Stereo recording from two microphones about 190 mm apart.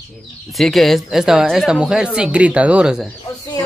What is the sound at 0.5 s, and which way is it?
Speech, centre (ahead or behind).